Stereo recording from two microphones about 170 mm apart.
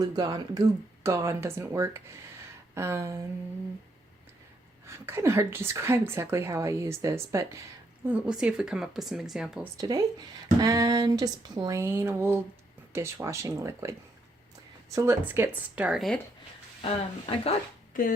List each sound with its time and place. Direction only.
0.0 s a woman's voice: 25° right (ahead or behind)
4.9 s a woman's voice: 15° right (ahead or behind)
8.0 s speech: 5° right (ahead or behind)
9.7 s a woman's voice: 20° right (ahead or behind); by 16.1 s 5° right (ahead or behind)
16.8 s speech: 35° left (ahead or behind)
18.0 s speech: 55° left (ahead or behind)